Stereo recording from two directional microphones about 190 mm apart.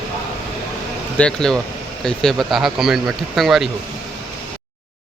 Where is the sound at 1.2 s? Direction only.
5° left (ahead or behind).